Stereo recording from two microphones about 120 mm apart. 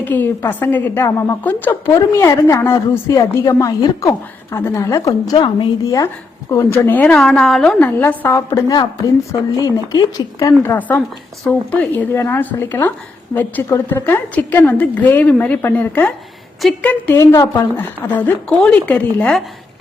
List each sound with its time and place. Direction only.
0.0 s a woman's voice: 15° left (ahead or behind)
1.9 s a woman's voice: 30° left (ahead or behind)
4.5 s a woman's voice: 25° left (ahead or behind)
7.2 s a woman's voice: 5° left (ahead or behind); by 8.4 s 20° left (ahead or behind)
8.4 s a woman's voice: 35° left (ahead or behind)
10.8 s a woman's voice: 15° left (ahead or behind)
17.2 s a woman's voice: 25° left (ahead or behind)
17.7 s a woman's voice: 15° left (ahead or behind)